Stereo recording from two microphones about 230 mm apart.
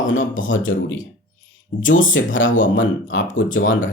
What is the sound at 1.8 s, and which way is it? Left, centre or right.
Speech, left.